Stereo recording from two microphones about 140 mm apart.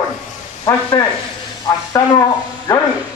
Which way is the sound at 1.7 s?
15° left (ahead or behind).